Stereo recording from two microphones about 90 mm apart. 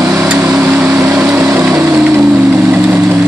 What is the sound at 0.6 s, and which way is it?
Vehicle, 20° right (ahead or behind).